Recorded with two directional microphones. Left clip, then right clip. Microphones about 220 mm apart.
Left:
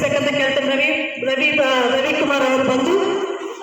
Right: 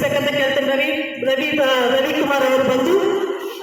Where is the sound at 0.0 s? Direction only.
45° right (ahead or behind).